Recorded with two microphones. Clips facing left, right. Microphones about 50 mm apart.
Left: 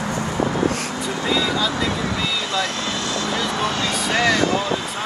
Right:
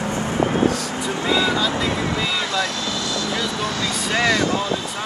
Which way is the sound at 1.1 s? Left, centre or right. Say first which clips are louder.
Right 2 dB; right.